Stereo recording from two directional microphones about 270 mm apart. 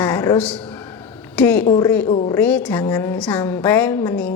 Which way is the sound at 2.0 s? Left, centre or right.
Centre.